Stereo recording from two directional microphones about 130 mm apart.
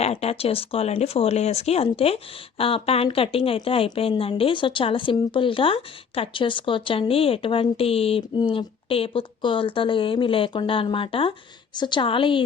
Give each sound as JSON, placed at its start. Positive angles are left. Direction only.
{"t": 0.0, "sound": "a woman's voice", "side_deg": 55}